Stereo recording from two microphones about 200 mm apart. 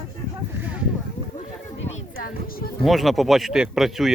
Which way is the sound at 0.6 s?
5° right (ahead or behind).